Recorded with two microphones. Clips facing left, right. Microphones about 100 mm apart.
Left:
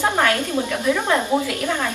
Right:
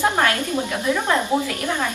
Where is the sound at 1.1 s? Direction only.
20° left (ahead or behind).